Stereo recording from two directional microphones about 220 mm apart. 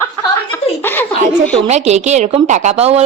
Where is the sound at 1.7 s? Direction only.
30° right (ahead or behind).